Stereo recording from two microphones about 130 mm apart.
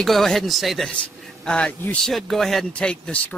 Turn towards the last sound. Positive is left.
turn(degrees=5)  # may be behind; listen again after turning